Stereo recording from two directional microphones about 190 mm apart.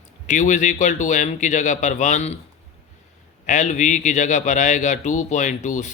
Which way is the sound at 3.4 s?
40° left (ahead or behind).